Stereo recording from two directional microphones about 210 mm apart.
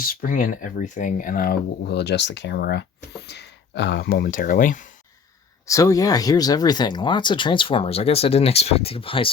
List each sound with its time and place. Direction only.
0.1 s speech: 40° left (ahead or behind)
5.6 s speech: 15° left (ahead or behind)